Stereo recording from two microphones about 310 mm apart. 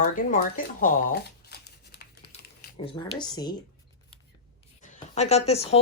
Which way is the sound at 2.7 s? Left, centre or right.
Centre.